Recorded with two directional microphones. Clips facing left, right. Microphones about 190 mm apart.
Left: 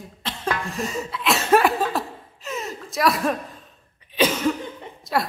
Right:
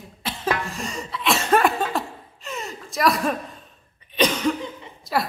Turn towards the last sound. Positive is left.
turn(degrees=0)  # may be behind; listen again after turning